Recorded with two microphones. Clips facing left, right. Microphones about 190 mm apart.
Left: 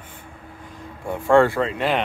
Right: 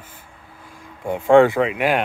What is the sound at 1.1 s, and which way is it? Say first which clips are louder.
Speech: right 3 dB; 20° right (ahead or behind).